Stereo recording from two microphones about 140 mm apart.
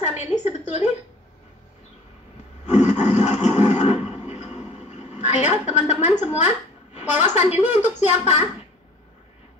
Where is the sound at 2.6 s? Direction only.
55° left (ahead or behind).